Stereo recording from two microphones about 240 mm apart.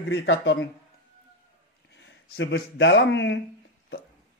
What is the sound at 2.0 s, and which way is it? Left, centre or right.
Speech, left.